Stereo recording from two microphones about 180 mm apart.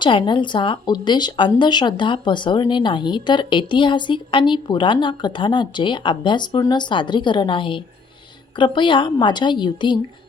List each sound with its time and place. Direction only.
0.0 s speech: 25° left (ahead or behind)